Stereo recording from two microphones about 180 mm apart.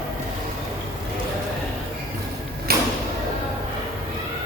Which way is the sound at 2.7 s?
60° right (ahead or behind).